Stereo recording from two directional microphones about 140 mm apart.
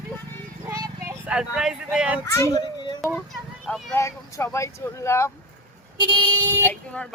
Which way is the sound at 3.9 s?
20° left (ahead or behind).